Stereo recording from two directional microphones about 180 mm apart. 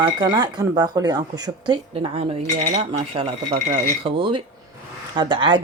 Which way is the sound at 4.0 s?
30° right (ahead or behind).